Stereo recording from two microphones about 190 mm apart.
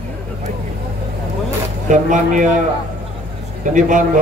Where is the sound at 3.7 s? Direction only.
40° right (ahead or behind).